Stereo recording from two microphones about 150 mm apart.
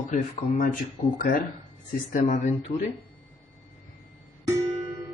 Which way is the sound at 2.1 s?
55° left (ahead or behind).